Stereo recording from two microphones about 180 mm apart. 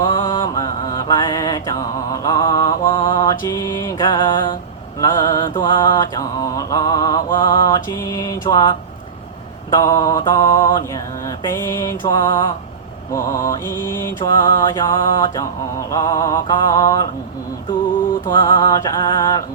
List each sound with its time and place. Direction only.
0.0 s mantra: 25° left (ahead or behind)
9.6 s music: 20° left (ahead or behind)
11.4 s mantra: 15° left (ahead or behind)
14.4 s music: 25° left (ahead or behind)